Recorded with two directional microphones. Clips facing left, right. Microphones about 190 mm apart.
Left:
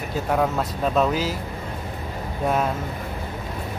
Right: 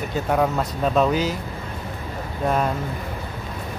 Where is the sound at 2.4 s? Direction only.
5° left (ahead or behind).